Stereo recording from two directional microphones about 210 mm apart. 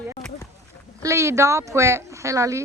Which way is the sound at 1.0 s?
15° right (ahead or behind).